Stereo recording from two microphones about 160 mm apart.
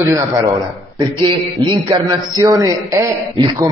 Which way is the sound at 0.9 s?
30° right (ahead or behind).